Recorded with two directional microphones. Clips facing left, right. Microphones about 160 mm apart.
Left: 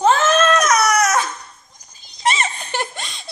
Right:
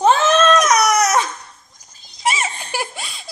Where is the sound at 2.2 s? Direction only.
5° right (ahead or behind).